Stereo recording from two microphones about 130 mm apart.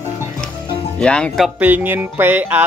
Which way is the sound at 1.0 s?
5° left (ahead or behind).